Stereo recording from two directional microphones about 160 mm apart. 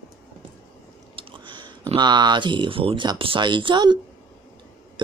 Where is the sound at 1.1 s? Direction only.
30° right (ahead or behind).